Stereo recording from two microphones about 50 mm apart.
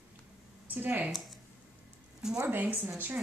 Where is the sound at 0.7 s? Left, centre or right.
Right.